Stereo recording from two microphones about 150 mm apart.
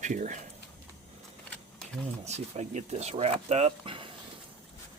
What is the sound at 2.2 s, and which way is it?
Speech, 50° right (ahead or behind).